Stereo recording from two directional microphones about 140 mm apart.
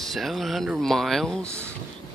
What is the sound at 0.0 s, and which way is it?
Speech, centre (ahead or behind).